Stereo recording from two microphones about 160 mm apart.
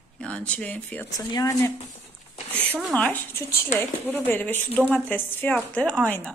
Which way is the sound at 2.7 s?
5° left (ahead or behind).